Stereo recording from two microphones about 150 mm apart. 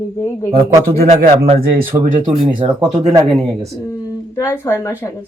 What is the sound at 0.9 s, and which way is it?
Speech, 50° right (ahead or behind).